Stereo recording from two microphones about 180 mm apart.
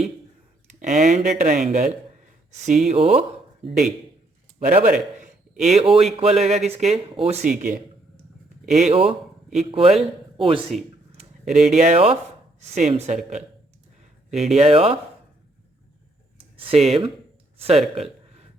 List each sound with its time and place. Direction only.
0.8 s speech: 40° right (ahead or behind)
4.8 s a sound: 45° right (ahead or behind)
6.1 s speech: 35° right (ahead or behind)
11.4 s speech: centre (ahead or behind)
11.7 s speech: 40° right (ahead or behind)
14.3 s speech: centre (ahead or behind)
14.5 s speech: 35° right (ahead or behind)
16.4 s speech: 30° right (ahead or behind)